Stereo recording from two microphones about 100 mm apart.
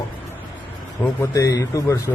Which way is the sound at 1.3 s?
40° left (ahead or behind).